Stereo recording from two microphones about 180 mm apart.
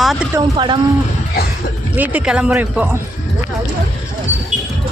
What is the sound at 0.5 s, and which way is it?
Speech, 25° right (ahead or behind).